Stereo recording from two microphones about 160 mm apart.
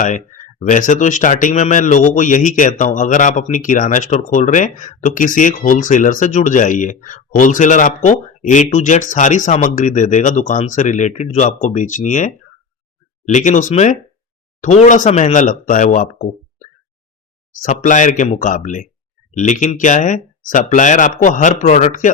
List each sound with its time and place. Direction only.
0.0 s a man's voice: 55° left (ahead or behind)